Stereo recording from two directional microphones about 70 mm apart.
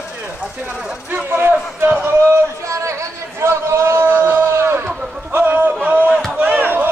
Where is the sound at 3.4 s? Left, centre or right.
Right.